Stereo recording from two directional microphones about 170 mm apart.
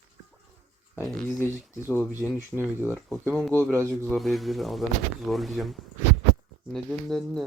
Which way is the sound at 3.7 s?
15° right (ahead or behind).